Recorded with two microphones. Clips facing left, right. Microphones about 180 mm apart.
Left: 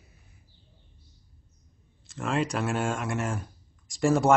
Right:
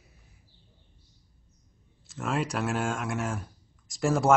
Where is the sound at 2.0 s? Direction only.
Centre (ahead or behind).